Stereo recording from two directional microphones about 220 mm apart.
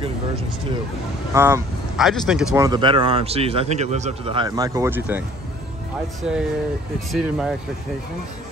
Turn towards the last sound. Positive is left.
turn(degrees=0)  # may be behind; listen again after turning